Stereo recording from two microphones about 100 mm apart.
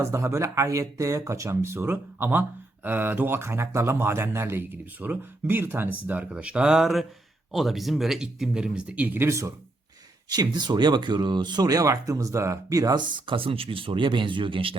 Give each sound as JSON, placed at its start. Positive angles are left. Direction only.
{"t": 0.0, "sound": "speech", "side_deg": -30}
{"t": 10.2, "sound": "speech", "side_deg": -45}
{"t": 13.0, "sound": "speech", "side_deg": -55}